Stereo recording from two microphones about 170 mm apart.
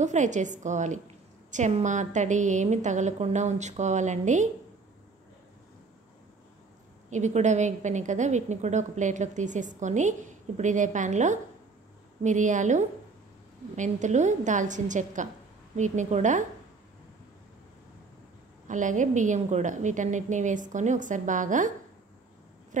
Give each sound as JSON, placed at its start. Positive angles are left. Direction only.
{"t": 0.0, "sound": "a woman's voice", "side_deg": -45}
{"t": 7.1, "sound": "a woman's voice", "side_deg": -45}
{"t": 18.7, "sound": "a woman's voice", "side_deg": -45}